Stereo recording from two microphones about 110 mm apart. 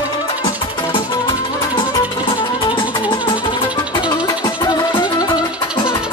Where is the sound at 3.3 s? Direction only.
45° left (ahead or behind).